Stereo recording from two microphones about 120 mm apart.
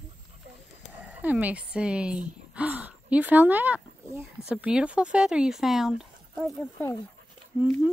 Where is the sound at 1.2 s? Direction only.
15° right (ahead or behind).